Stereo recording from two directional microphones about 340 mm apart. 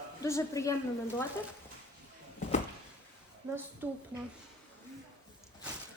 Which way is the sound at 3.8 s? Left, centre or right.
Centre.